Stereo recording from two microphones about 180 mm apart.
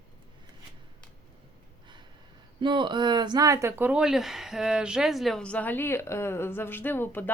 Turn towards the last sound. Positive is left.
turn(degrees=10)  # may be behind; listen again after turning